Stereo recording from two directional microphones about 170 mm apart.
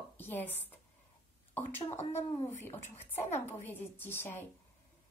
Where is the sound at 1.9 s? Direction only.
40° left (ahead or behind).